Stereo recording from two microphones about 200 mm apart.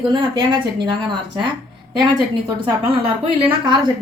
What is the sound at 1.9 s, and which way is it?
A woman's voice, 20° right (ahead or behind).